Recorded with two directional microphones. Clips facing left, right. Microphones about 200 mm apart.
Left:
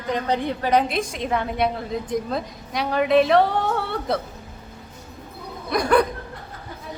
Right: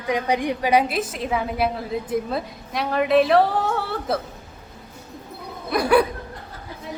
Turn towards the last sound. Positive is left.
turn(degrees=-5)  # may be behind; listen again after turning